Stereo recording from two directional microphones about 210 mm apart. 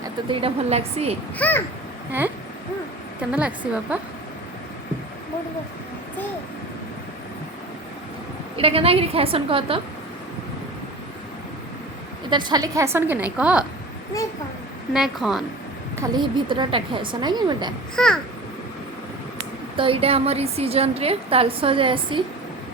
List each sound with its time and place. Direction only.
0.3 s a woman's voice: 30° right (ahead or behind)
1.4 s a child's voice: 10° left (ahead or behind)
3.2 s a woman's voice: 5° right (ahead or behind)
8.5 s a woman's voice: 25° right (ahead or behind)
12.3 s a woman's voice: 20° right (ahead or behind); by 13.7 s 5° right (ahead or behind)
14.9 s a woman's voice: centre (ahead or behind)
16.0 s a woman's voice: 20° right (ahead or behind)
17.9 s a woman's voice: 5° left (ahead or behind)
19.7 s a woman's voice: 25° right (ahead or behind)